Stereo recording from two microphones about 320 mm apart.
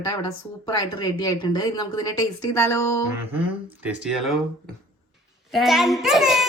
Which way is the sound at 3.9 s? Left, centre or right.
Centre.